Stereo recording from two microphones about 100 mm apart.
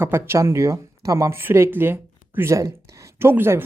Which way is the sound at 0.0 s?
25° right (ahead or behind).